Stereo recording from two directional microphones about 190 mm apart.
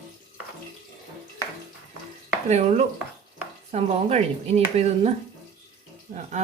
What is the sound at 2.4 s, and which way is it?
A man's voice, 35° right (ahead or behind).